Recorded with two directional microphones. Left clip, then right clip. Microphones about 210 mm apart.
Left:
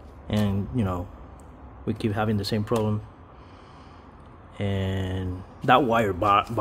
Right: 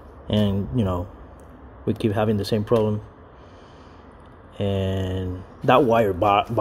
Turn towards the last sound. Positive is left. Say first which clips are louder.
# right 2 dB
turn(degrees=0)  # may be behind; listen again after turning